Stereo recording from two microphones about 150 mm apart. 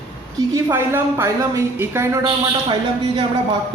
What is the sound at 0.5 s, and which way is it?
A woman's voice, 15° right (ahead or behind).